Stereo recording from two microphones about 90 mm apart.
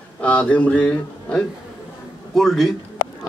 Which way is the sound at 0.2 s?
15° left (ahead or behind).